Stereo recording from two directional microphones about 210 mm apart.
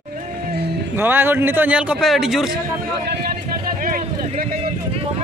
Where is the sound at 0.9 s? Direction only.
10° right (ahead or behind).